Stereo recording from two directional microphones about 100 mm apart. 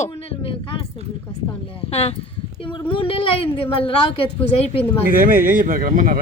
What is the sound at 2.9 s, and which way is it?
Speech, 65° left (ahead or behind).